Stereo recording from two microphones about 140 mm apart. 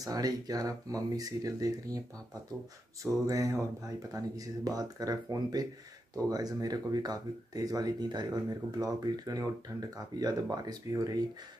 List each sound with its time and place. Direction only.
0.0 s speech: 25° right (ahead or behind)
3.0 s speech: 25° right (ahead or behind)